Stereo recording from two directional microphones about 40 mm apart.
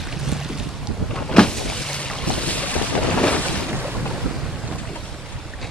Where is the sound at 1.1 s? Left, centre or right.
Left.